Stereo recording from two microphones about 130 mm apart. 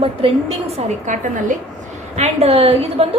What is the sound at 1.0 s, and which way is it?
Speech, 70° right (ahead or behind).